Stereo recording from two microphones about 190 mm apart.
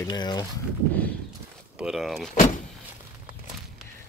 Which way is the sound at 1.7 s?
Centre (ahead or behind).